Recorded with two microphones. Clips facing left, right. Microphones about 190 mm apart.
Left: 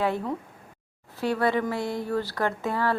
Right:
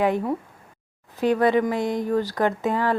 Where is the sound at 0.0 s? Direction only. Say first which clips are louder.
Right 5 dB; 15° right (ahead or behind).